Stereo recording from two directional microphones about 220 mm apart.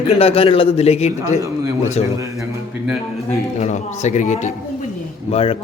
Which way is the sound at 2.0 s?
15° right (ahead or behind).